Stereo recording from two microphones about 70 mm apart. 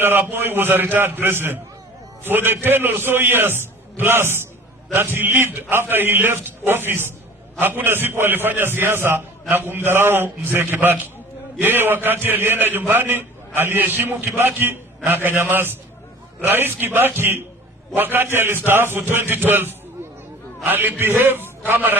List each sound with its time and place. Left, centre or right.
0.0 s a man's voice: right